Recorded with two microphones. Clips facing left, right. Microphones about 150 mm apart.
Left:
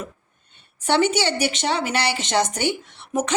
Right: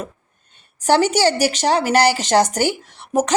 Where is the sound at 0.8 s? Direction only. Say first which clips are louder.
Right 4 dB; 40° right (ahead or behind).